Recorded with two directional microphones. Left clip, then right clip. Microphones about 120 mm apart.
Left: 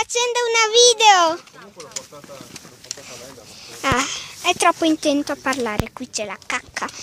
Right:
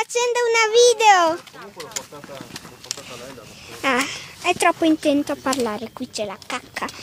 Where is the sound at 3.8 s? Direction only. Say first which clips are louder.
Left 1 dB; 5° left (ahead or behind).